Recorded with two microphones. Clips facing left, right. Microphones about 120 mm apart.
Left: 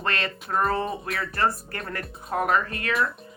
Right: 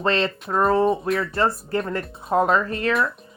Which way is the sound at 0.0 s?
25° right (ahead or behind).